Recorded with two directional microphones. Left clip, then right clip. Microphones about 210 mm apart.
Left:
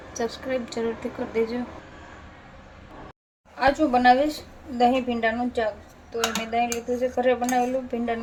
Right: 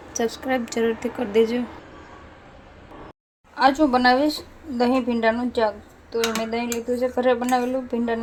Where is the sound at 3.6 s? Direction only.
35° right (ahead or behind).